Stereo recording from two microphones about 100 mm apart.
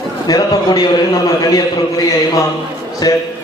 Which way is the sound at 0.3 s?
45° left (ahead or behind).